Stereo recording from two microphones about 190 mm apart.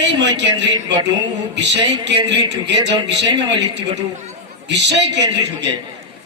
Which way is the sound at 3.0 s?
65° right (ahead or behind).